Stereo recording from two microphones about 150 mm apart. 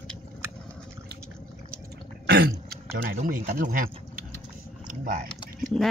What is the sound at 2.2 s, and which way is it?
Throat clearing, 90° right.